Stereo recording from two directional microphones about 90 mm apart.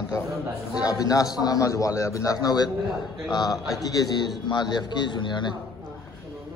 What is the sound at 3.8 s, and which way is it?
A man's voice, 45° left (ahead or behind).